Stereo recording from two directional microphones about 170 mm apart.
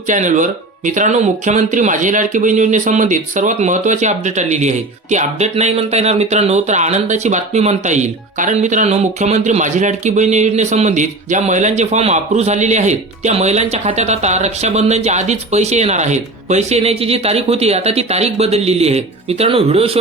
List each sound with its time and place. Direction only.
0.1 s speech: 45° right (ahead or behind)